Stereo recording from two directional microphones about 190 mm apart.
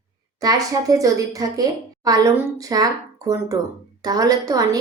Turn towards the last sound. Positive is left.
turn(degrees=-20)  # may be behind; listen again after turning